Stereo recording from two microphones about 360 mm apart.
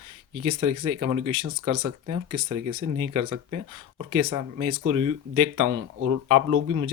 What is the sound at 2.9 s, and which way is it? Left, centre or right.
Speech, right.